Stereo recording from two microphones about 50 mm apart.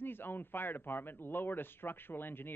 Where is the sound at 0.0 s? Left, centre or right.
Left.